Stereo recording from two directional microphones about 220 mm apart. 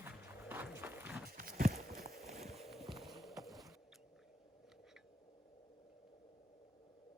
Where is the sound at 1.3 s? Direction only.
40° right (ahead or behind).